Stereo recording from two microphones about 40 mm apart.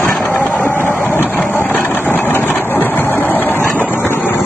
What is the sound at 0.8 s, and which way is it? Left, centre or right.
Vehicle, left.